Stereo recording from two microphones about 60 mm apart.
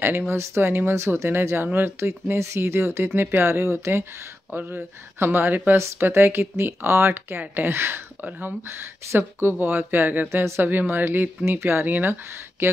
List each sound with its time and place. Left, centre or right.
0.3 s speech: right
4.6 s speech: right
10.3 s speech: right
10.7 s speech: right